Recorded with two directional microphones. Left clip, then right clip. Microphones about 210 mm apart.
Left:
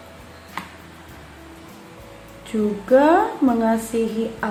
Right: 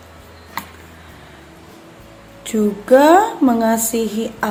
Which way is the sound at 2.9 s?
50° right (ahead or behind).